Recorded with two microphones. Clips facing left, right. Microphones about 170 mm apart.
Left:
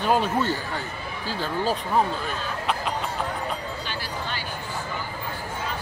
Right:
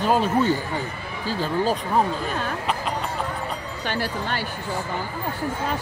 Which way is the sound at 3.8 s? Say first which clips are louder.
Right 6 dB; 60° right (ahead or behind).